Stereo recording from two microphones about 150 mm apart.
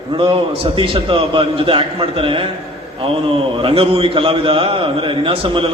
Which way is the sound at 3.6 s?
40° right (ahead or behind).